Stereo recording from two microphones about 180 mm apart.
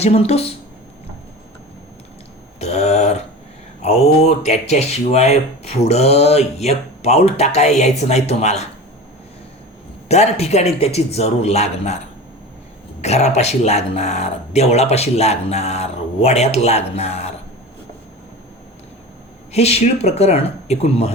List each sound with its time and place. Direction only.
0.0 s speech: 35° left (ahead or behind)
2.6 s a sound: 35° left (ahead or behind)
3.8 s speech: 35° left (ahead or behind)
10.1 s speech: 35° left (ahead or behind)
13.0 s speech: 40° left (ahead or behind)
19.5 s speech: 35° left (ahead or behind)